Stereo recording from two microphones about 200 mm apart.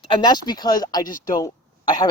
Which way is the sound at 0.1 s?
20° left (ahead or behind).